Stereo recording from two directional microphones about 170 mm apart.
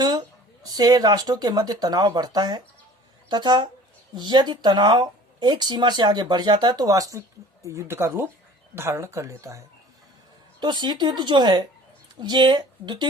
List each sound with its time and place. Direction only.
0.0 s speech: 25° right (ahead or behind)